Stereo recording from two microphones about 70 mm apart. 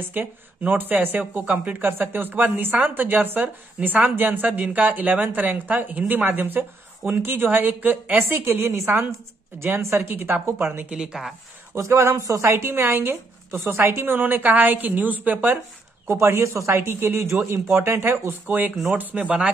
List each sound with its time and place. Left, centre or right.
0.1 s a woman's voice: right
10.9 s a woman's voice: centre
11.7 s a woman's voice: right
16.1 s a woman's voice: right
19.1 s a woman's voice: centre